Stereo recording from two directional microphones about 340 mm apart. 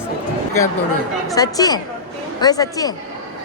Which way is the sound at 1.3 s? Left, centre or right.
Centre.